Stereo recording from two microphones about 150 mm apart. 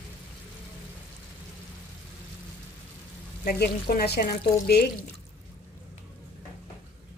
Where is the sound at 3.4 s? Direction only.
90° left.